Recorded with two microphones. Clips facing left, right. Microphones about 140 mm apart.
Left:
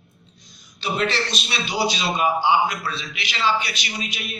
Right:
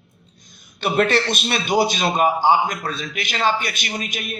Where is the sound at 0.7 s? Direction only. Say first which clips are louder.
Right 5 dB; 55° right (ahead or behind).